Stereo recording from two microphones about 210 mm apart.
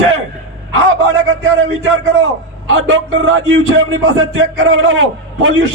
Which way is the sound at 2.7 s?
65° right (ahead or behind).